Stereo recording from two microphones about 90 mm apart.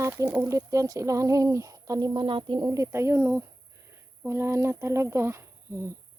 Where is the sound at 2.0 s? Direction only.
60° right (ahead or behind).